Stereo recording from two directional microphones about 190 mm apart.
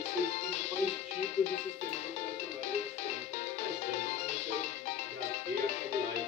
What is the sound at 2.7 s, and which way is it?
Music, 35° left (ahead or behind).